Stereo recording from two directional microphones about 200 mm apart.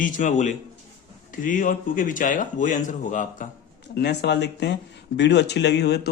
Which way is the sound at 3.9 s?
55° left (ahead or behind).